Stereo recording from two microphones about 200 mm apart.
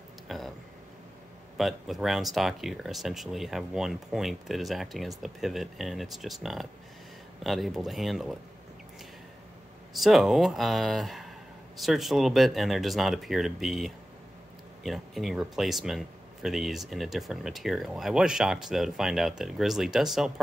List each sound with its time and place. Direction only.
0.3 s a sound: centre (ahead or behind)
1.6 s speech: centre (ahead or behind)
9.9 s speech: centre (ahead or behind)